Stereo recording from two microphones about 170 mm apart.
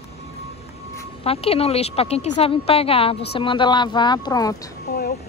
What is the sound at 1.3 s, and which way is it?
A woman's voice, 35° left (ahead or behind).